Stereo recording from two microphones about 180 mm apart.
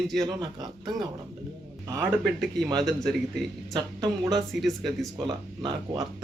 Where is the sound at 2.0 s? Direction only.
5° left (ahead or behind).